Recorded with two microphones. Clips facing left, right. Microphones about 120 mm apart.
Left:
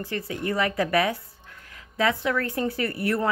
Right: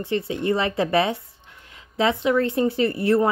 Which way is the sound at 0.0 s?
25° right (ahead or behind).